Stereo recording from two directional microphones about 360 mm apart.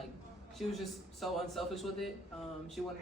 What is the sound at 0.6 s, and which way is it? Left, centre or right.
A man's voice, centre.